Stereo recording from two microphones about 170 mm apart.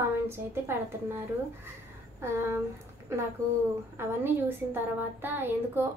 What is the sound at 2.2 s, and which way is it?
Speech, 15° right (ahead or behind).